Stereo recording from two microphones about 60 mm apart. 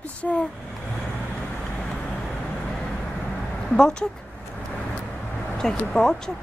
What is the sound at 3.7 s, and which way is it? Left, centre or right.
Speech, centre.